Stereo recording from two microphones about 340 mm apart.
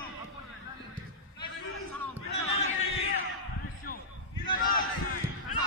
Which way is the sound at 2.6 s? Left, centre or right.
Left.